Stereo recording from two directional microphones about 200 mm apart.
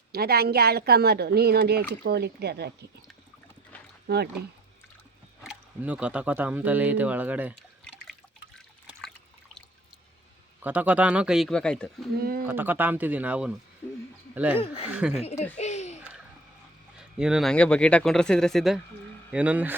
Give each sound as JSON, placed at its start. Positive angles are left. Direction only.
{"t": 0.1, "sound": "speech", "side_deg": -50}
{"t": 4.0, "sound": "speech", "side_deg": -55}
{"t": 5.5, "sound": "speech", "side_deg": -5}
{"t": 8.9, "sound": "trickle", "side_deg": 0}
{"t": 10.6, "sound": "speech", "side_deg": -10}
{"t": 12.1, "sound": "speech", "side_deg": -50}
{"t": 12.5, "sound": "speech", "side_deg": -10}
{"t": 14.5, "sound": "a woman's voice", "side_deg": 30}
{"t": 17.0, "sound": "speech", "side_deg": -5}